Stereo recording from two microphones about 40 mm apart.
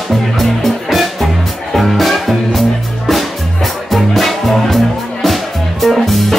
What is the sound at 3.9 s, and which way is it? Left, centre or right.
Music, centre.